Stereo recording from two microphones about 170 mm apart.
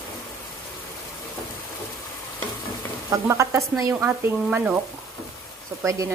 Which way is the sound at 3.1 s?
20° right (ahead or behind).